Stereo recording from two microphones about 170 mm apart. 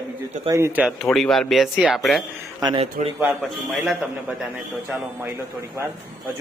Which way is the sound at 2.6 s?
25° right (ahead or behind).